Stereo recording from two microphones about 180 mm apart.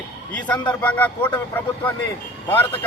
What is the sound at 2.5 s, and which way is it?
Speech, 10° left (ahead or behind).